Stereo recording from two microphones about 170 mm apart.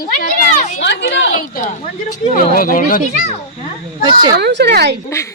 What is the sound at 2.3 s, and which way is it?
Speech, 55° left (ahead or behind).